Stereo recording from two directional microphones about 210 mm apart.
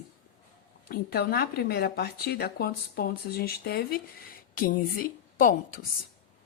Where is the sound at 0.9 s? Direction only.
45° left (ahead or behind).